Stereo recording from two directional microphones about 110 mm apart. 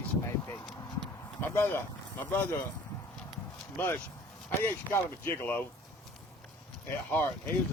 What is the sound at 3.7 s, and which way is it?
Speech, 20° left (ahead or behind).